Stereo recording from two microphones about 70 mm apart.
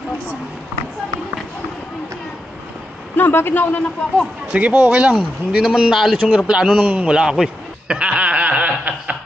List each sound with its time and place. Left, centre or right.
3.2 s a man's voice: left
4.5 s a man's voice: centre
5.5 s speech: centre
6.8 s a sound: centre